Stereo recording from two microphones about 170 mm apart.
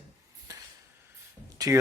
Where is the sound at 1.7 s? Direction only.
15° right (ahead or behind).